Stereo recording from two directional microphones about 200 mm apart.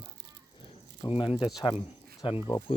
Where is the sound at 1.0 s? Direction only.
25° left (ahead or behind).